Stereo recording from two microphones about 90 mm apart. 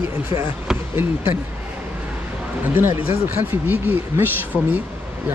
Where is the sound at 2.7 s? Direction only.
25° right (ahead or behind).